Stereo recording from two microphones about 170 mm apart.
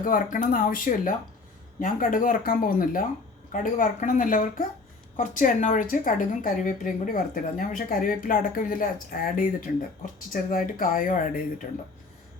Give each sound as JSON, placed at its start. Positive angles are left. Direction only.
{"t": 0.0, "sound": "a woman's voice", "side_deg": 55}